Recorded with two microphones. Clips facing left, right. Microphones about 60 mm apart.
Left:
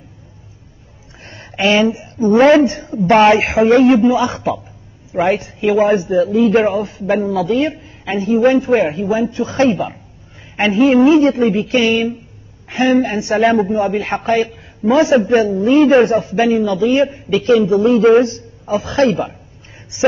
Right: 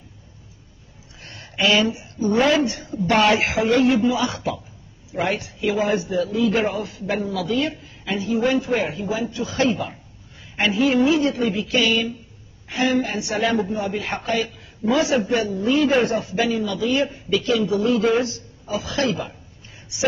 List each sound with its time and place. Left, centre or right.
1.2 s a woman's voice: left